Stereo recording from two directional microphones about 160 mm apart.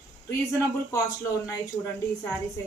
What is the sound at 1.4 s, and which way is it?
Speech, 15° left (ahead or behind).